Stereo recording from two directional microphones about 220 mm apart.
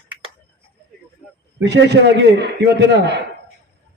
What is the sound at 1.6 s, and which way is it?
A man's voice, 50° right (ahead or behind).